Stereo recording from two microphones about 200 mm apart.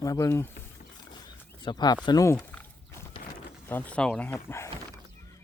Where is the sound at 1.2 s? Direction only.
20° left (ahead or behind).